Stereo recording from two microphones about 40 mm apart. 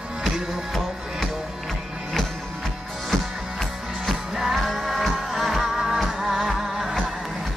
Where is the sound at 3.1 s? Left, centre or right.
Centre.